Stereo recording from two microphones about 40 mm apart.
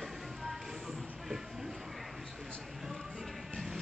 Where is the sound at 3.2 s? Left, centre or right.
Centre.